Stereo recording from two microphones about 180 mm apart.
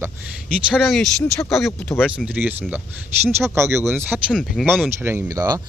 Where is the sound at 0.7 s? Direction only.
Centre (ahead or behind).